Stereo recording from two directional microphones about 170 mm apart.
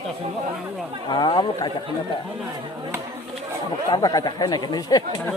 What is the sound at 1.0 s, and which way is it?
Speech, 25° left (ahead or behind).